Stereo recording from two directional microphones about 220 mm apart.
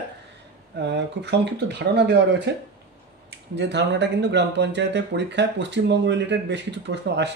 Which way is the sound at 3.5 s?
50° right (ahead or behind).